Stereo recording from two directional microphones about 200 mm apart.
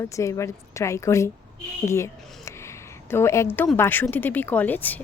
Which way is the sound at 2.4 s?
15° left (ahead or behind).